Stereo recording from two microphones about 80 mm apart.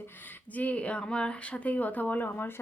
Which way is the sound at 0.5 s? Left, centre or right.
Centre.